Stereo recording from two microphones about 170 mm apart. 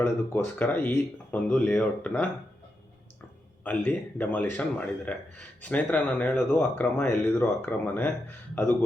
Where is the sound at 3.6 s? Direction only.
10° left (ahead or behind).